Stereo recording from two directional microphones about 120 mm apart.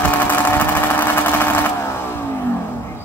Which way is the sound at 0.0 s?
15° left (ahead or behind).